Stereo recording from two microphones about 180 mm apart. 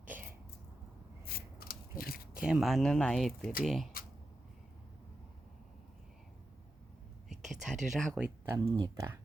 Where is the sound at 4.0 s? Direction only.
55° left (ahead or behind).